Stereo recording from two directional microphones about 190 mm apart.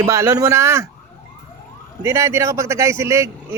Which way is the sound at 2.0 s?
15° right (ahead or behind).